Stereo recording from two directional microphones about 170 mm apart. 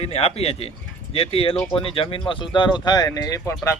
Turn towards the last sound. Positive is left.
turn(degrees=20)  # may be behind; listen again after turning